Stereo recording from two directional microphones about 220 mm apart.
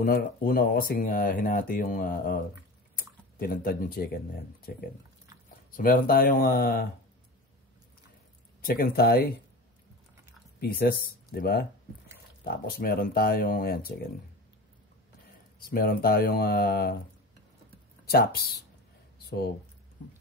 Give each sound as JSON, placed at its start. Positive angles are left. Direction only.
{"t": 0.0, "sound": "speech", "side_deg": 40}
{"t": 8.6, "sound": "speech", "side_deg": 45}
{"t": 10.6, "sound": "speech", "side_deg": 45}
{"t": 15.6, "sound": "speech", "side_deg": 40}
{"t": 18.0, "sound": "speech", "side_deg": 45}
{"t": 19.1, "sound": "a sound", "side_deg": 45}